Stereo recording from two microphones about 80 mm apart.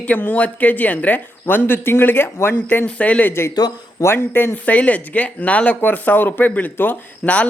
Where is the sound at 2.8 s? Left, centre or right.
Centre.